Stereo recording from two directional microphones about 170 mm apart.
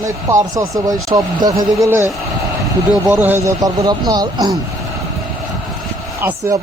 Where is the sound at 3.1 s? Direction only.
10° right (ahead or behind).